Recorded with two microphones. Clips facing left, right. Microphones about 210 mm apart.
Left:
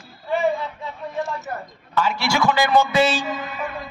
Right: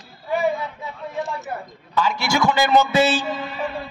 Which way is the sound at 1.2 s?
15° right (ahead or behind).